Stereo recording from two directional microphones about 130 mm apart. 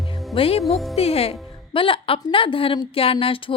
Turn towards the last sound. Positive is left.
turn(degrees=45)  # may be behind; listen again after turning